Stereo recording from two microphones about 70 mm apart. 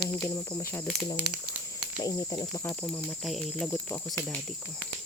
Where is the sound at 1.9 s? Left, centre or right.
Left.